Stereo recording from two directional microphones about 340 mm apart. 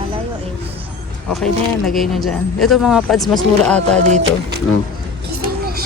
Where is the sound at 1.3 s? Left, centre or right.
Centre.